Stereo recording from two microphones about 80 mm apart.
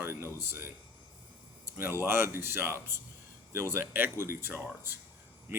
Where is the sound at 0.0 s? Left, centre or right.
Right.